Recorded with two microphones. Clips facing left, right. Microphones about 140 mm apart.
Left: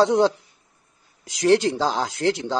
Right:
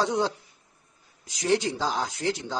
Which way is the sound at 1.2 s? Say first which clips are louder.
Left 7 dB; 90° left.